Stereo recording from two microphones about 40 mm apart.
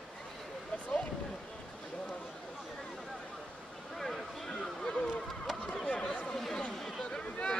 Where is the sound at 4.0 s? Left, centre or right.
Centre; by 6.1 s left.